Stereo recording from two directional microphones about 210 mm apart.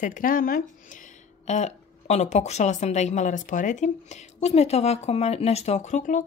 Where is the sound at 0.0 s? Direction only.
40° left (ahead or behind).